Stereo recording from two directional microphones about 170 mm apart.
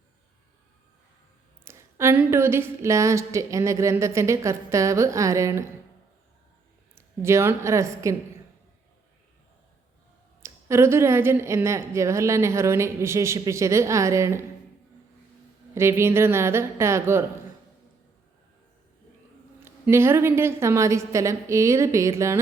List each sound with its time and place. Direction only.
1.6 s a woman's voice: 15° right (ahead or behind)
6.9 s a woman's voice: 15° right (ahead or behind)
10.4 s a woman's voice: 15° right (ahead or behind)
15.7 s a woman's voice: 15° right (ahead or behind)
19.5 s a woman's voice: 15° right (ahead or behind)